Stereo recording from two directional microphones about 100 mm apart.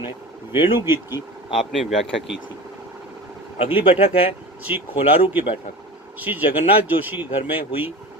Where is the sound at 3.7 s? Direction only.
70° left (ahead or behind).